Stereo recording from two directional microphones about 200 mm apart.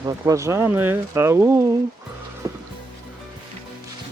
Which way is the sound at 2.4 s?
20° right (ahead or behind).